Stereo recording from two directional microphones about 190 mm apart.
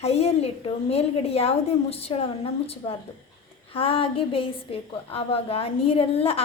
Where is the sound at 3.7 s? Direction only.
30° left (ahead or behind).